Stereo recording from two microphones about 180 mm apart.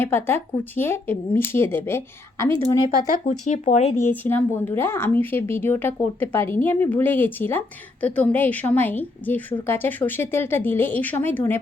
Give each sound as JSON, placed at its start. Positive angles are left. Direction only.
{"t": 0.0, "sound": "speech", "side_deg": 15}
{"t": 3.2, "sound": "speech", "side_deg": 40}
{"t": 4.0, "sound": "speech", "side_deg": 10}